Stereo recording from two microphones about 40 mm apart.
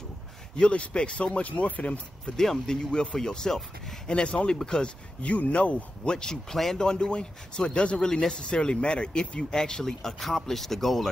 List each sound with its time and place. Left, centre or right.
0.6 s speech: left
2.3 s speech: centre
4.1 s speech: left
4.6 s speech: centre
5.2 s speech: left
6.0 s speech: centre
6.8 s speech: centre